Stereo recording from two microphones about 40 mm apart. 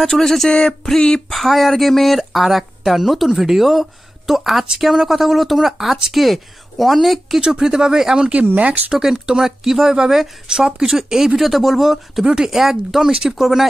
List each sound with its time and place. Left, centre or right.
0.0 s a sound: centre
1.3 s speech: centre
7.4 s speech: centre
8.5 s speech: right
8.9 s speech: centre